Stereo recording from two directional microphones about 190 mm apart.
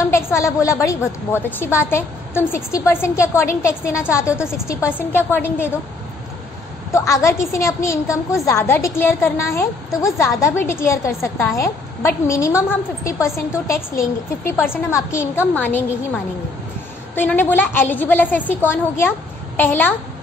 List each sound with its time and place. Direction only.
0.1 s a woman's voice: 15° left (ahead or behind)
6.9 s a woman's voice: 15° left (ahead or behind)